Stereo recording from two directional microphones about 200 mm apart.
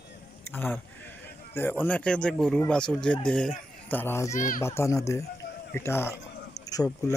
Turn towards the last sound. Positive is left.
turn(degrees=15)  # may be behind; listen again after turning